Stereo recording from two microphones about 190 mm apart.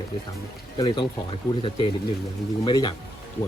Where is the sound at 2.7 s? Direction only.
25° left (ahead or behind).